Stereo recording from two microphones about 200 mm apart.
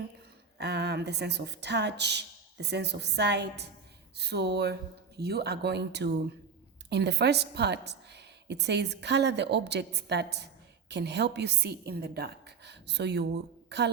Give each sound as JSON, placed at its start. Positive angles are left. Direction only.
{"t": 0.6, "sound": "a woman's voice", "side_deg": -55}